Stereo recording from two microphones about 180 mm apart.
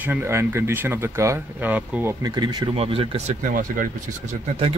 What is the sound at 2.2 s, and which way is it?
Speech, 20° right (ahead or behind).